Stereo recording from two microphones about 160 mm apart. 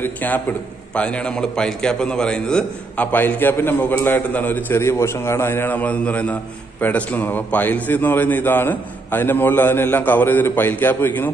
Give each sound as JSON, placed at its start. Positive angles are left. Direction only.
{"t": 0.0, "sound": "a man's voice", "side_deg": 10}